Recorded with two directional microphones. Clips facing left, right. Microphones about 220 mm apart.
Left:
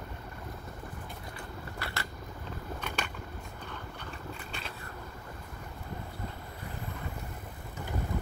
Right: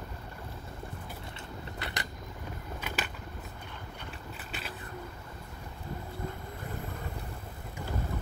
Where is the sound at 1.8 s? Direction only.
20° right (ahead or behind).